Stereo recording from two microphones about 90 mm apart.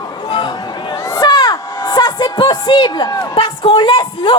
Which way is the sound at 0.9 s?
40° left (ahead or behind).